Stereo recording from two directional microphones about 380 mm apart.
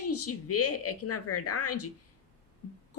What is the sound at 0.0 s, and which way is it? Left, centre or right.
A woman's voice, left.